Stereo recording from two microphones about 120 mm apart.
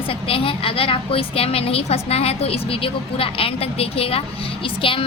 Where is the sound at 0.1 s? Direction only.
50° left (ahead or behind).